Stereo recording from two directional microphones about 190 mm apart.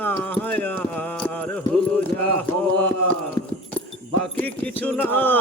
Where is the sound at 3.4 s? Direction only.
25° left (ahead or behind).